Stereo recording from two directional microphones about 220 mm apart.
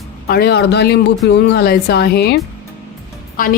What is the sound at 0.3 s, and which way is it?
A woman's voice, 45° left (ahead or behind).